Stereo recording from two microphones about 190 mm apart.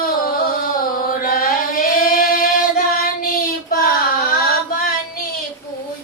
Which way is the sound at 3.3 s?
50° left (ahead or behind).